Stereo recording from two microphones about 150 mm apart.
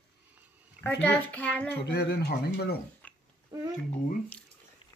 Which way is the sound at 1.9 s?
90° left.